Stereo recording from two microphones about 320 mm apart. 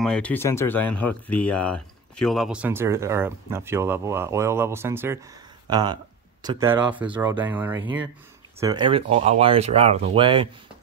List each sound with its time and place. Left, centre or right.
0.0 s speech: centre